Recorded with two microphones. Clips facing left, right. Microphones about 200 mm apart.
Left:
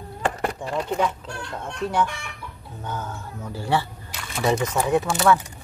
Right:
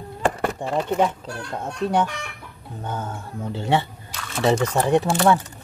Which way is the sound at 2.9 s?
30° right (ahead or behind).